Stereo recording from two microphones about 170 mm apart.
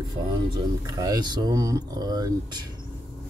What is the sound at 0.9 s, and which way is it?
Speech, 20° right (ahead or behind).